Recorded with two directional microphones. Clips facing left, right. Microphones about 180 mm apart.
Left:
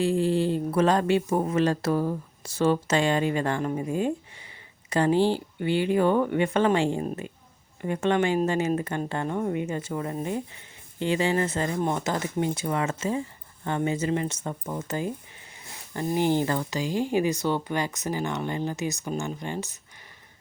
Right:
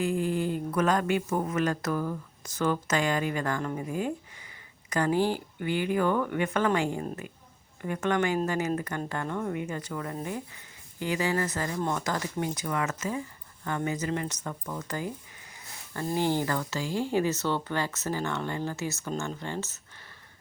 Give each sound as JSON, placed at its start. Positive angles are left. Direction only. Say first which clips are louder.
{"t": 0.0, "sound": "speech", "louder": "left 4 dB", "side_deg": 30}